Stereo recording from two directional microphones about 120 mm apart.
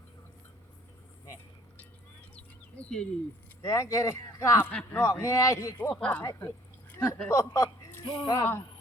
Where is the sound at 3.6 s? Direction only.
25° left (ahead or behind).